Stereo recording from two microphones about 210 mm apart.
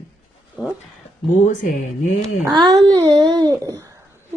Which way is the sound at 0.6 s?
5° right (ahead or behind).